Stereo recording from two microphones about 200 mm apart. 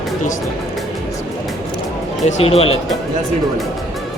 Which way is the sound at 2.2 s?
30° left (ahead or behind).